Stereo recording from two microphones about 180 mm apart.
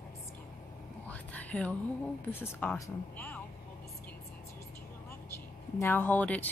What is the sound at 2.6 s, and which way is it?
Speech, 15° left (ahead or behind).